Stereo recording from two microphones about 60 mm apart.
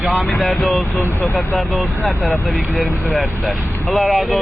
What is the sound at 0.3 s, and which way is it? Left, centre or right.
Speech, centre.